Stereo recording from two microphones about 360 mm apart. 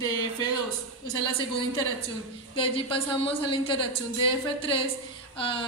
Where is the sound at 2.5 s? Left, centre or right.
Centre.